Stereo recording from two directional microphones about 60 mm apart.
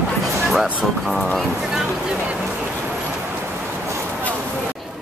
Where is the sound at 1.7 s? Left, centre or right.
Centre.